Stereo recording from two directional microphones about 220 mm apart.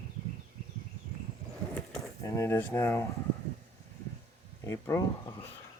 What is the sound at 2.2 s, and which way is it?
Speech, 15° left (ahead or behind).